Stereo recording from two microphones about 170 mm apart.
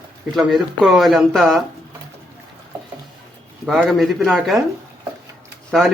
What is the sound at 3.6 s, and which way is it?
Speech, centre (ahead or behind).